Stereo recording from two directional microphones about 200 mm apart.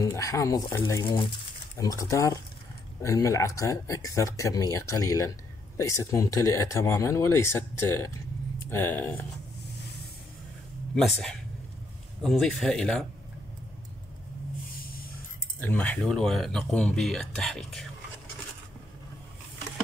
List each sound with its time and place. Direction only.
0.0 s speech: 15° left (ahead or behind)
11.0 s speech: centre (ahead or behind)
15.6 s speech: 10° left (ahead or behind)